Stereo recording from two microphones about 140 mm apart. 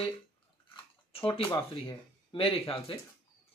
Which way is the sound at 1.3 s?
40° left (ahead or behind).